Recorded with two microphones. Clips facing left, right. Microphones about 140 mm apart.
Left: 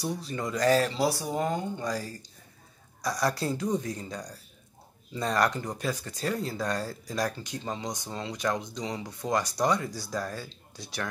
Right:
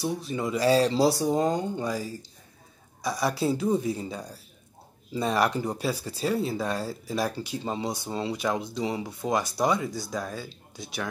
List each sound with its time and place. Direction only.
0.4 s speech: 10° right (ahead or behind)
0.8 s speech: 30° right (ahead or behind)
1.8 s speech: 5° right (ahead or behind)
7.5 s speech: 25° right (ahead or behind)
9.6 s speech: 5° right (ahead or behind)